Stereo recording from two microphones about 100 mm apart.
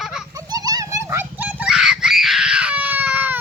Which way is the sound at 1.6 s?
5° right (ahead or behind).